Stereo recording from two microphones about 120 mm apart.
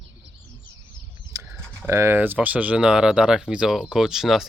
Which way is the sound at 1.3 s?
25° right (ahead or behind).